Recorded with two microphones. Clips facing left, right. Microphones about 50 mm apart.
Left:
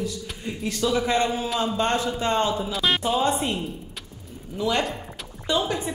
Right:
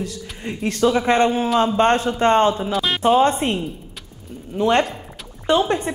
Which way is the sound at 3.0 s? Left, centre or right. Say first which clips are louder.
Right 7 dB; right.